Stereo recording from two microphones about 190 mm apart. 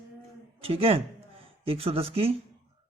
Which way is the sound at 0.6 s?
30° right (ahead or behind).